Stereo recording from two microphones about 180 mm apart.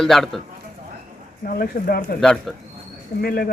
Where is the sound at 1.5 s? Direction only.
50° left (ahead or behind).